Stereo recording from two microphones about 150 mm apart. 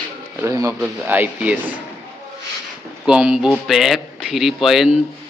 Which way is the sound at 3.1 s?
5° right (ahead or behind).